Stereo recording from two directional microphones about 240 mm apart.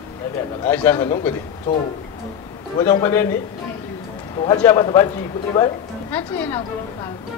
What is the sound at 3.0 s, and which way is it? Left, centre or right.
Speech, centre.